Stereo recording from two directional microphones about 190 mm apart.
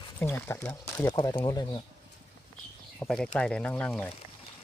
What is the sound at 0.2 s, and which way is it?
Speech, 10° left (ahead or behind).